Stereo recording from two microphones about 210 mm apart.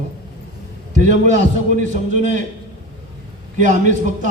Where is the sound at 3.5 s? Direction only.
35° right (ahead or behind).